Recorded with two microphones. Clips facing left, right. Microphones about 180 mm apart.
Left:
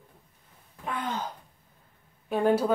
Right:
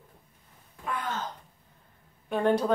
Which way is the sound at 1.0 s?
15° left (ahead or behind).